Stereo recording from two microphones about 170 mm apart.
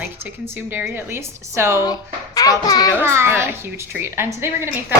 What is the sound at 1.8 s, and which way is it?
A child's voice, 20° left (ahead or behind).